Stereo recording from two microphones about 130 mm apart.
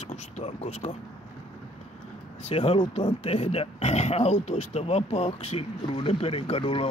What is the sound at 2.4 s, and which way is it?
Speech, 50° left (ahead or behind).